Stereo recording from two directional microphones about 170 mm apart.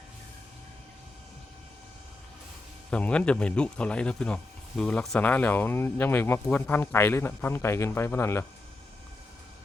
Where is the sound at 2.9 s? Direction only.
5° left (ahead or behind).